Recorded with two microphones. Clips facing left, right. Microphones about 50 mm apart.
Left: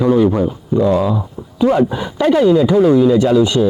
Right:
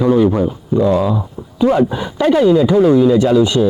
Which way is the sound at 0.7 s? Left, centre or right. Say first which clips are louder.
Even; centre.